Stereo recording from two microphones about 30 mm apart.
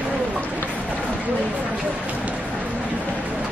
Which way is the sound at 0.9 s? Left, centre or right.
Right.